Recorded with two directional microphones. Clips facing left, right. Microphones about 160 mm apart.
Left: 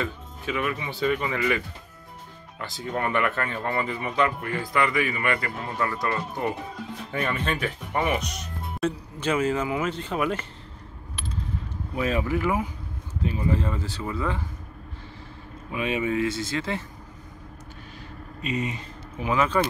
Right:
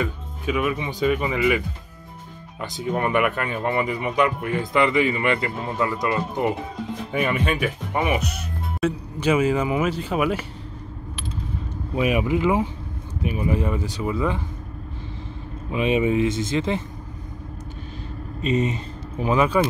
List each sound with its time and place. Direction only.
0.0 s speech: 15° right (ahead or behind)
2.6 s speech: 20° right (ahead or behind)
12.0 s speech: 15° right (ahead or behind)
15.7 s speech: 20° right (ahead or behind)
18.4 s speech: 25° right (ahead or behind)
19.3 s speech: 15° right (ahead or behind)